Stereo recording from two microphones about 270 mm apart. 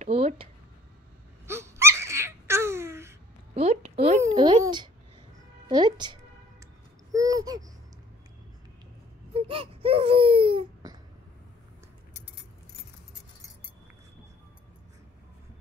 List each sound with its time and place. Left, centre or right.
0.0 s a sound: right
1.5 s laughter: centre
3.5 s a sound: right
5.7 s music: centre
7.1 s babbling: centre
9.3 s baby cry: centre